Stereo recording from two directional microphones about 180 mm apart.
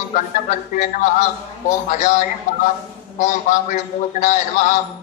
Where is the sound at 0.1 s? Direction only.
45° left (ahead or behind).